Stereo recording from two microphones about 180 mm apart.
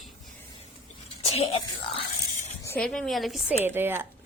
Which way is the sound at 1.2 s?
30° left (ahead or behind).